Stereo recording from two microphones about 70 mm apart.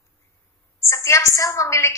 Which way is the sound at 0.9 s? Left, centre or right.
Left.